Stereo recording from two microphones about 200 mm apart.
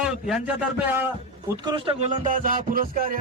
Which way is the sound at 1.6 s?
25° right (ahead or behind).